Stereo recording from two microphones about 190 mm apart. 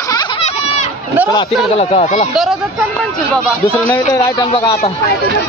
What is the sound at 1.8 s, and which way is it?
Speech, 35° left (ahead or behind).